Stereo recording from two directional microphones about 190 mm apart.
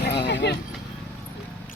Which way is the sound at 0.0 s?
65° left (ahead or behind).